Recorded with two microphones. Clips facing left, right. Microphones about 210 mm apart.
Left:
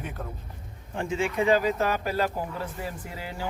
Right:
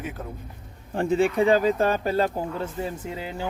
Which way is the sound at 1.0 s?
35° right (ahead or behind).